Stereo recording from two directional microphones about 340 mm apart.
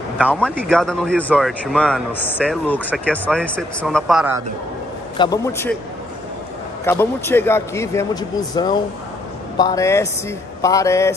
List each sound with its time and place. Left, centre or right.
0.2 s speech: centre
5.1 s a man's voice: centre
6.8 s a man's voice: centre